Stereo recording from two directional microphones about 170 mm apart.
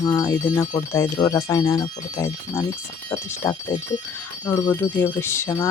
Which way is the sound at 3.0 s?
15° left (ahead or behind).